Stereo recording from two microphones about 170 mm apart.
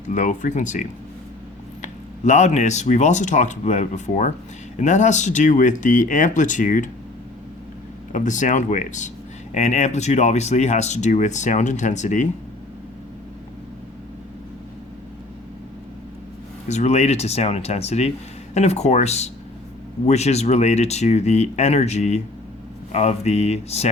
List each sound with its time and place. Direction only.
0.1 s speech: 50° left (ahead or behind)
8.1 s speech: 45° left (ahead or behind)
16.6 s speech: 40° left (ahead or behind)